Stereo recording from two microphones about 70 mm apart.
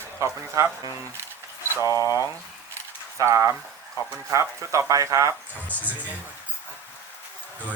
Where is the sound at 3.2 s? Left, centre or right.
Right.